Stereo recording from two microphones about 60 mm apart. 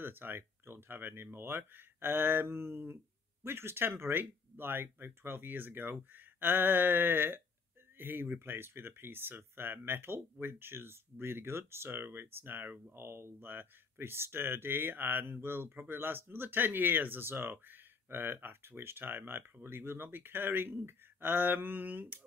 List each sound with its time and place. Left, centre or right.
0.0 s speech: right
12.9 s speech: right